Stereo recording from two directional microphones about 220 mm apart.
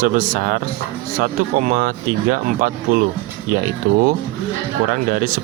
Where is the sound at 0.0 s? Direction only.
40° right (ahead or behind).